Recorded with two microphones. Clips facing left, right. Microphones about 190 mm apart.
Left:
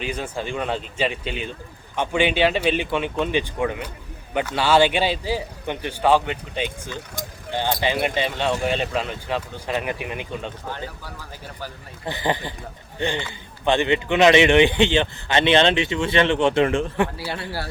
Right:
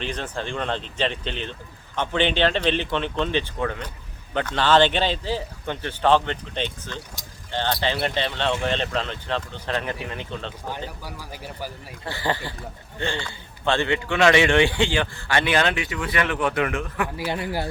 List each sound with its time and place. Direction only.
0.0 s a man's voice: 10° left (ahead or behind)
10.7 s speech: 10° right (ahead or behind)
12.0 s a man's voice: 20° left (ahead or behind)
17.2 s speech: 15° right (ahead or behind)